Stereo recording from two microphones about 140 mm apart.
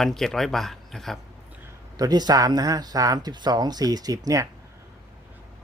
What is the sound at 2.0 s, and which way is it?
Speech, 30° right (ahead or behind).